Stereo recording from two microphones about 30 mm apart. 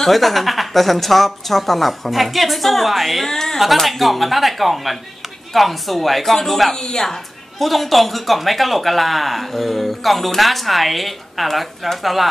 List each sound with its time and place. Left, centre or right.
0.0 s speech: centre
3.3 s speech: centre
3.7 s speech: centre
6.7 s speech: centre
7.5 s speech: centre